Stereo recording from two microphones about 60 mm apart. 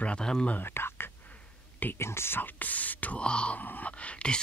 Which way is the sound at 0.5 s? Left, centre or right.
Left.